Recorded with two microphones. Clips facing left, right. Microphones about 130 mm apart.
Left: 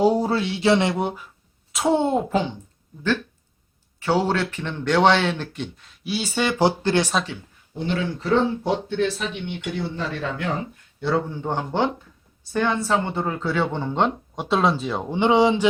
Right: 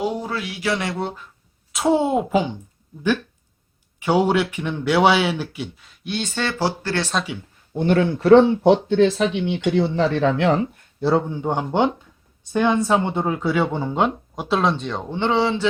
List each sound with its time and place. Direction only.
0.0 s speech: 35° left (ahead or behind); by 1.3 s 10° left (ahead or behind)
1.7 s speech: centre (ahead or behind)
4.0 s speech: 15° right (ahead or behind); by 7.1 s 20° left (ahead or behind)
7.8 s speech: 55° right (ahead or behind); by 10.6 s 90° right
11.3 s speech: 15° right (ahead or behind); by 15.6 s 15° left (ahead or behind)